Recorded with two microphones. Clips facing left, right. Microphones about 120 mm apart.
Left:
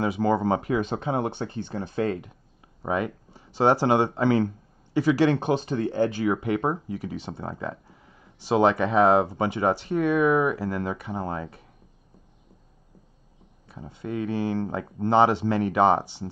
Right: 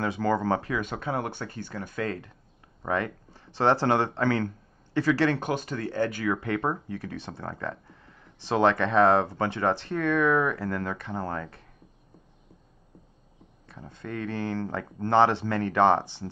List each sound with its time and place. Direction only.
0.0 s speech: 15° left (ahead or behind)
13.7 s speech: 10° left (ahead or behind)